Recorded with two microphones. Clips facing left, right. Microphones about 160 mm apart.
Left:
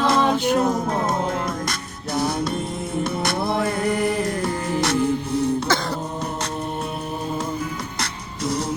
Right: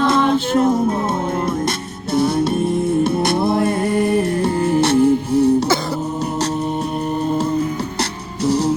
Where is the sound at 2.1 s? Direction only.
25° right (ahead or behind).